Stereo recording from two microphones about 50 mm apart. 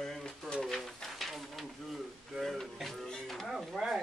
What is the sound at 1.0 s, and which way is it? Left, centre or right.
Speech, centre.